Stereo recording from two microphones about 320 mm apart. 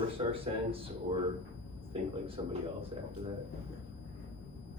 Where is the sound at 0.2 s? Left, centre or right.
Centre.